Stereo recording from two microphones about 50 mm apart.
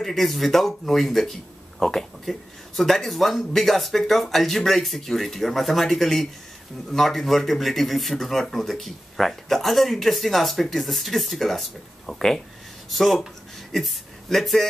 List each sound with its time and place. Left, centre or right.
0.0 s speech: centre